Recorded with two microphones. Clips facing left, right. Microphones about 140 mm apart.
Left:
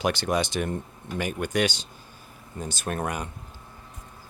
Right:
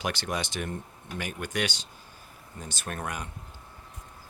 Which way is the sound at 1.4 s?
35° left (ahead or behind).